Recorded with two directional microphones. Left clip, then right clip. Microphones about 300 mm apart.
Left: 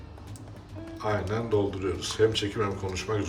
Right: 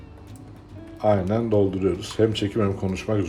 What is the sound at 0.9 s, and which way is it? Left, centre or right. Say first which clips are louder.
Speech: right 8 dB; centre.